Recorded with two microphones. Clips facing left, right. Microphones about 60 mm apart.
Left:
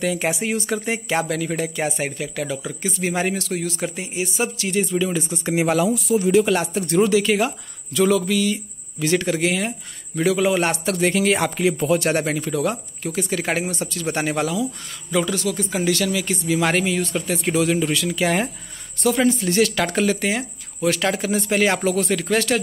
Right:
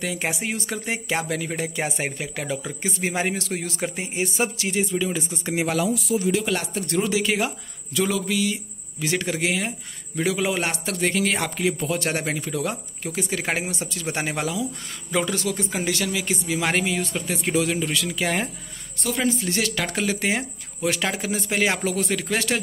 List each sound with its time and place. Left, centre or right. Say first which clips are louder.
0.0 s a man's voice: left 5 dB; centre
1.9 s a man's voice: left 3 dB; right
4.6 s speech: left 3 dB; centre
4.9 s a man's voice: left 3 dB; centre
5.5 s a man's voice: left 5 dB; centre
6.0 s speech: left 6 dB; left
6.4 s a man's voice: left 5 dB; centre
7.1 s a man's voice: left 5 dB; centre
13.0 s speech: left 3 dB; centre
15.0 s a man's voice: left 3 dB; right
15.7 s a man's voice: left 4 dB; centre
20.2 s a man's voice: left 1 dB; right
20.8 s speech: left 4 dB; centre